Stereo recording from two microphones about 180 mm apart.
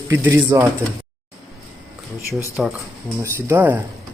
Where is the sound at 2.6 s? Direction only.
5° right (ahead or behind).